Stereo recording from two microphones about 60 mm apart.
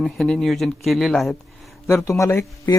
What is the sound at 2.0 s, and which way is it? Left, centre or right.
Speech, left.